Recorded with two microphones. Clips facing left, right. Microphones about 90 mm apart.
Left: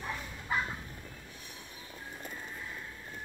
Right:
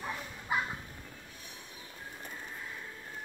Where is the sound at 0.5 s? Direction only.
10° right (ahead or behind).